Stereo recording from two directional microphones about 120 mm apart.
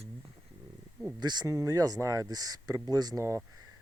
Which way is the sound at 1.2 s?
35° right (ahead or behind).